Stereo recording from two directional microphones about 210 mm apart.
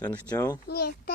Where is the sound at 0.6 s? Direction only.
50° left (ahead or behind).